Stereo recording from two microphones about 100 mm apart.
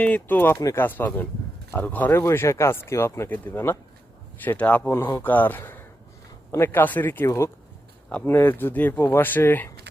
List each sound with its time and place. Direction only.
0.0 s speech: 15° left (ahead or behind)